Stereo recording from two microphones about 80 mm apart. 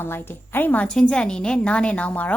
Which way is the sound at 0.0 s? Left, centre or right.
Left.